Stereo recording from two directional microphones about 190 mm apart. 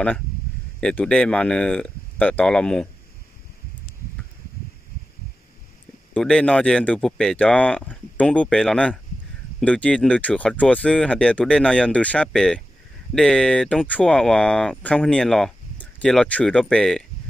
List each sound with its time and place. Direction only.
0.7 s speech: 5° left (ahead or behind)
6.1 s speech: 5° left (ahead or behind)